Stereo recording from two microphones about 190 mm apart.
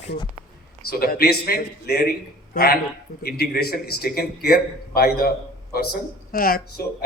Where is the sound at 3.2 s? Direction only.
55° left (ahead or behind).